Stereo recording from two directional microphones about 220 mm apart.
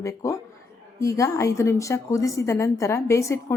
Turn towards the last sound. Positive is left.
turn(degrees=15)  # may be behind; listen again after turning